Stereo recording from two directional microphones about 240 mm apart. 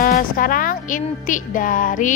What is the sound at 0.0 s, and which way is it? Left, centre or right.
A child's voice, left.